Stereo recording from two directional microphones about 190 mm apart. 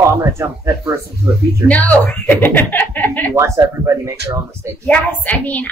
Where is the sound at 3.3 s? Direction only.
15° right (ahead or behind).